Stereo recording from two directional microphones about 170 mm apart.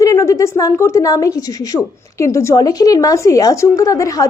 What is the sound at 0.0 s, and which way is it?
A woman's voice, 20° left (ahead or behind).